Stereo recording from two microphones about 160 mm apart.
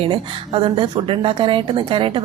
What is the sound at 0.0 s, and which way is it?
A woman's voice, 30° right (ahead or behind).